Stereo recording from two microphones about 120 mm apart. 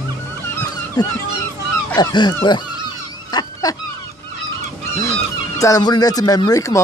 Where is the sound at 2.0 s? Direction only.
35° left (ahead or behind).